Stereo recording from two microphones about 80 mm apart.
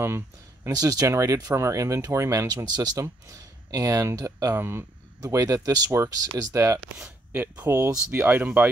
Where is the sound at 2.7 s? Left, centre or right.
Right.